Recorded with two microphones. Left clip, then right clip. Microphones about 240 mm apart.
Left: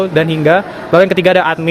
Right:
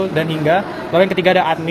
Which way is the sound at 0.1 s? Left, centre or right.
Left.